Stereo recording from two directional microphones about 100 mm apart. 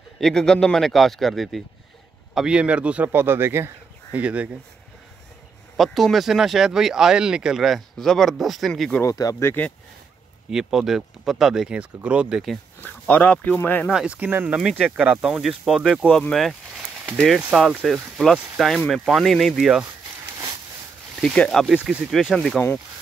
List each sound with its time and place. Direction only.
0.2 s a man's voice: 5° left (ahead or behind); by 4.5 s 15° right (ahead or behind)
5.8 s speech: centre (ahead or behind)
9.0 s speech: 35° left (ahead or behind)
10.5 s speech: 5° right (ahead or behind)
12.8 s speech: 15° left (ahead or behind)
13.9 s a man's voice: 15° right (ahead or behind); by 16.5 s 5° left (ahead or behind)
17.6 s speech: centre (ahead or behind)
21.2 s speech: 5° left (ahead or behind)